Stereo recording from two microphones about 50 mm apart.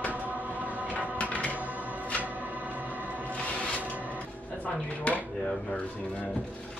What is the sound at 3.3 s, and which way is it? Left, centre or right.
Music, left.